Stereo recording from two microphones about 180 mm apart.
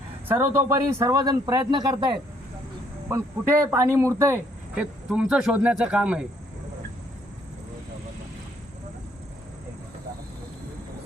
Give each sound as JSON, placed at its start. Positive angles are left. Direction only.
{"t": 0.3, "sound": "speech", "side_deg": -15}